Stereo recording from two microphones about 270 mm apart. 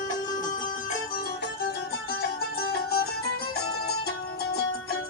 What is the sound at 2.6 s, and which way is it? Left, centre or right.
Music, left.